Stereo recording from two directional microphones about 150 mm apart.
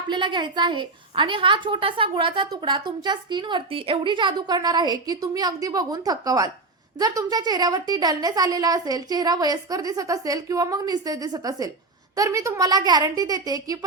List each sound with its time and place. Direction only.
0.1 s a woman's voice: 30° right (ahead or behind)